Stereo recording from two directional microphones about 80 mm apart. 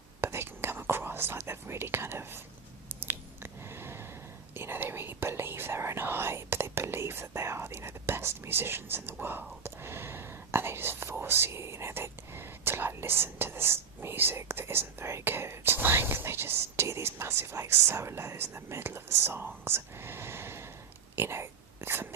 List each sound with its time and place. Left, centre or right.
0.2 s whispering: right
2.9 s squish: right
4.5 s whispering: right
9.2 s speech: right
21.2 s a sound: right